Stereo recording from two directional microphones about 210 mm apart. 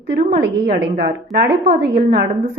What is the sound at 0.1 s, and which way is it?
A woman's voice, 50° right (ahead or behind).